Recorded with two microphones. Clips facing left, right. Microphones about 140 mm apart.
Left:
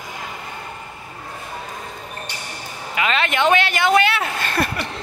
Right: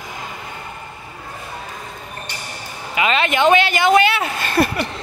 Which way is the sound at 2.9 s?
5° right (ahead or behind).